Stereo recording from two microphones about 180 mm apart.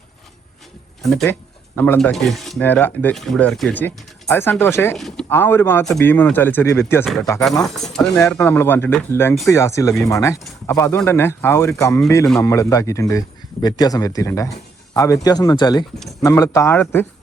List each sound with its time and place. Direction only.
1.0 s speech: centre (ahead or behind)
4.9 s speech: centre (ahead or behind)
5.3 s speech: 10° left (ahead or behind)
7.0 s speech: centre (ahead or behind)